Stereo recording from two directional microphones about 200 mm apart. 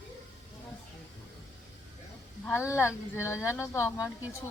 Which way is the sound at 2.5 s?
10° left (ahead or behind).